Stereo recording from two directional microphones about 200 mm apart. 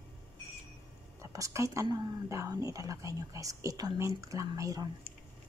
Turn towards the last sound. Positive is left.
turn(degrees=-15)  # may be behind; listen again after turning